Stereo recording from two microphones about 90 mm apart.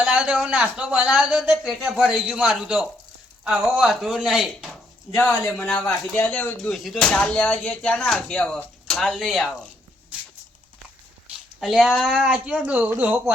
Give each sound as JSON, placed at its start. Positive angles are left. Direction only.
{"t": 0.0, "sound": "speech", "side_deg": -10}
{"t": 5.1, "sound": "speech", "side_deg": 25}
{"t": 5.6, "sound": "speech", "side_deg": 15}
{"t": 6.7, "sound": "speech", "side_deg": 0}
{"t": 11.6, "sound": "speech", "side_deg": 0}